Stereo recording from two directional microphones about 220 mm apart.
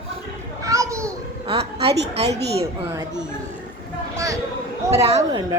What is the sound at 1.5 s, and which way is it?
Speech, 25° right (ahead or behind).